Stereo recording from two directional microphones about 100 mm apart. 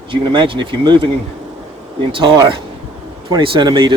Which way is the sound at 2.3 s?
45° right (ahead or behind).